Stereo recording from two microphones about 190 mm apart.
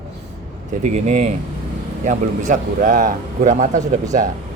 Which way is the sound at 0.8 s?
40° right (ahead or behind).